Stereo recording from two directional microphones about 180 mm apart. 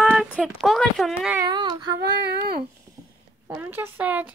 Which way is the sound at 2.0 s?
70° right (ahead or behind).